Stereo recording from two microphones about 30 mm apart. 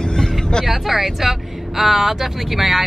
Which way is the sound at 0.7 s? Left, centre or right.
Centre.